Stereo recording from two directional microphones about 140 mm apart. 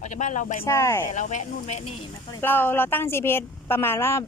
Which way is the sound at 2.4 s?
15° left (ahead or behind).